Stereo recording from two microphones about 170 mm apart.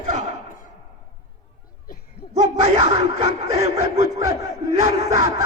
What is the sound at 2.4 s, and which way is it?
Speech, 40° right (ahead or behind).